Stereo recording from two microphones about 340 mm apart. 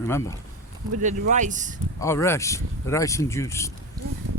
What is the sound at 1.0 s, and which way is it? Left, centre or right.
Speech, right.